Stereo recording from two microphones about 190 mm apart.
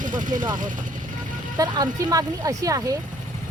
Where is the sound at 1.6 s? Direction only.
20° right (ahead or behind).